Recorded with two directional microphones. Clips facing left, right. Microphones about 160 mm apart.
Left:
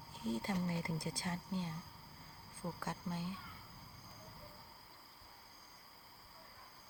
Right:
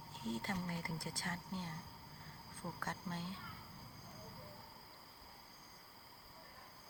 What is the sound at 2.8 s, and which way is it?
Speech, 10° left (ahead or behind).